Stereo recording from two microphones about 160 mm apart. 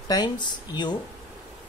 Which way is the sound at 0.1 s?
25° left (ahead or behind).